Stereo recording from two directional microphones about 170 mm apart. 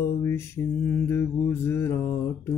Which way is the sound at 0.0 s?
15° left (ahead or behind).